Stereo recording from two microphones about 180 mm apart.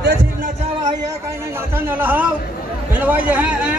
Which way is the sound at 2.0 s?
10° right (ahead or behind).